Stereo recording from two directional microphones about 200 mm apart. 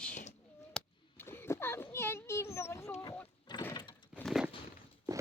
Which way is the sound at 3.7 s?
20° left (ahead or behind).